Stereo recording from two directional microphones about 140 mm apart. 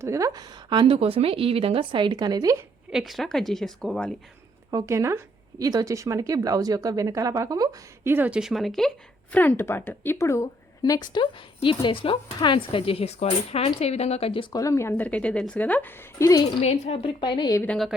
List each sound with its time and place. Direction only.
0.0 s a woman's voice: 25° right (ahead or behind)
2.9 s a woman's voice: centre (ahead or behind)
4.7 s speech: 25° right (ahead or behind)
8.0 s a woman's voice: 15° right (ahead or behind); by 8.9 s centre (ahead or behind)
9.3 s speech: 15° left (ahead or behind); by 14.4 s 45° left (ahead or behind)
14.5 s a woman's voice: 20° left (ahead or behind)
16.6 s speech: 45° left (ahead or behind); by 17.6 s 30° left (ahead or behind)